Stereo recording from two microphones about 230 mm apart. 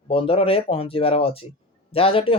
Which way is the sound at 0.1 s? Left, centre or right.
Left.